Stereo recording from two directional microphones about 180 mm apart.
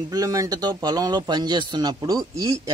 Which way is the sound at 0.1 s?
20° right (ahead or behind).